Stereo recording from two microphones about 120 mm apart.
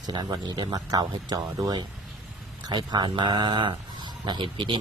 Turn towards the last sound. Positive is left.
turn(degrees=-40)  # may be behind; listen again after turning